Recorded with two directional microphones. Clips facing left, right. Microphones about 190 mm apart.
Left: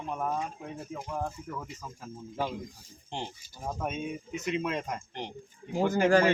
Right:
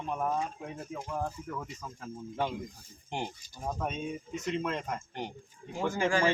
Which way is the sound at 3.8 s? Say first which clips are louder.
Left 3 dB; 5° left (ahead or behind).